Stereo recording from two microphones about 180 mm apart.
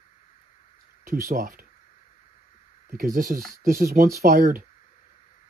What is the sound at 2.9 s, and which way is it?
Speech, 45° right (ahead or behind).